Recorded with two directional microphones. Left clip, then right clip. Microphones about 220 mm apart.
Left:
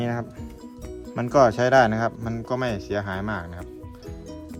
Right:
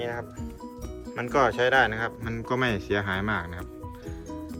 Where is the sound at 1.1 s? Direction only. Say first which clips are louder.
Left 5 dB; 15° left (ahead or behind).